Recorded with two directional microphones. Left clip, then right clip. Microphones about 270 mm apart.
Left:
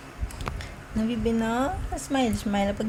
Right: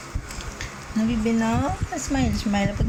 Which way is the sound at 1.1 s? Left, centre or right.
Centre.